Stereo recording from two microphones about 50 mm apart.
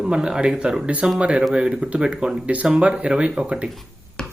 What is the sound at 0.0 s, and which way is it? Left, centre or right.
Speech, centre.